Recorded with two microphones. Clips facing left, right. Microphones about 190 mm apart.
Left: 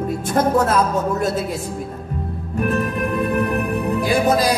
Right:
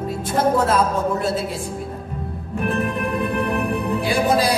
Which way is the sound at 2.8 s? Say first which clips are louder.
Left 2 dB; 40° left (ahead or behind).